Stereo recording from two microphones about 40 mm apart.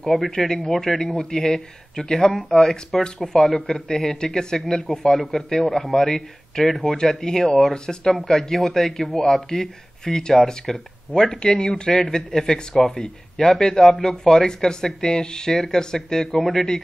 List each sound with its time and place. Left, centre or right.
0.3 s speech: centre
3.9 s speech: centre
11.1 s speech: left
11.4 s speech: left